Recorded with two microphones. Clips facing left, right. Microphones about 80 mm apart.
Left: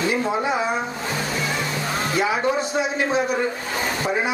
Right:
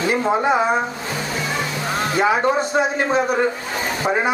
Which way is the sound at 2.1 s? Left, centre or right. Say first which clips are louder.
Right 4 dB; right.